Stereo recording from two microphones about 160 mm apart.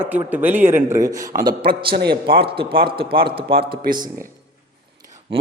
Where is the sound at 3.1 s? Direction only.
80° right.